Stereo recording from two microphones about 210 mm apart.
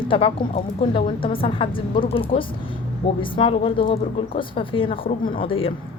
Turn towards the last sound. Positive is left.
turn(degrees=25)  # may be behind; listen again after turning